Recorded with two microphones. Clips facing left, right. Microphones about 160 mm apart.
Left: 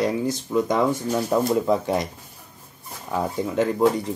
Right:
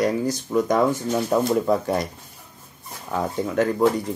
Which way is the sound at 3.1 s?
20° left (ahead or behind).